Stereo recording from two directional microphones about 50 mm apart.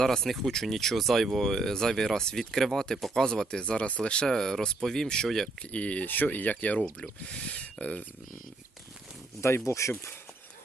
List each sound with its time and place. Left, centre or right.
0.0 s speech: centre
3.6 s speech: left
5.7 s speech: left
9.6 s speech: left